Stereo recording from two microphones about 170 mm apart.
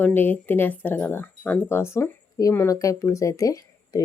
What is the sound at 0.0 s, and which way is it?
Speech, 10° left (ahead or behind).